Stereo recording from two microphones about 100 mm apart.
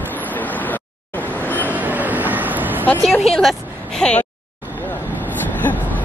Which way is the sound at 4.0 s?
10° left (ahead or behind).